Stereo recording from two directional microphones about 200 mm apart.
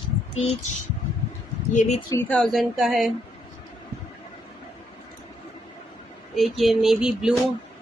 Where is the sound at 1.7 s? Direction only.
35° left (ahead or behind).